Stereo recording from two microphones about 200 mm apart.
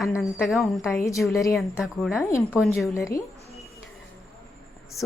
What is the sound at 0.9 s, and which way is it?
Speech, 15° left (ahead or behind).